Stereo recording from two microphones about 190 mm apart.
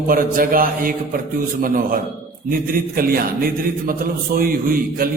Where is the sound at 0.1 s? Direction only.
50° right (ahead or behind).